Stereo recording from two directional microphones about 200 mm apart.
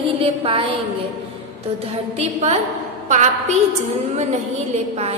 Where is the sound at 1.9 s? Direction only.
30° right (ahead or behind).